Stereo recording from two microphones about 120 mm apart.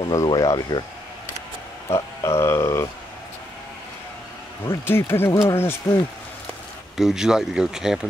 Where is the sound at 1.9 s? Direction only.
25° left (ahead or behind).